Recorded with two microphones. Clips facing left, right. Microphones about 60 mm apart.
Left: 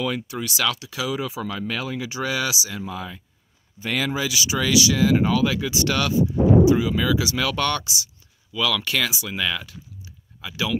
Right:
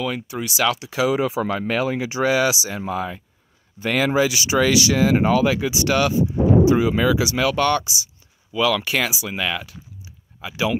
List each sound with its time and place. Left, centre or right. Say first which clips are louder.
0.0 s speech: right 1 dB; centre
0.9 s speech: right 7 dB; right
2.8 s speech: right 6 dB; right
5.7 s speech: right 4 dB; centre
6.6 s speech: right 2 dB; right
7.2 s speech: right 4 dB; centre
8.5 s speech: right 4 dB; right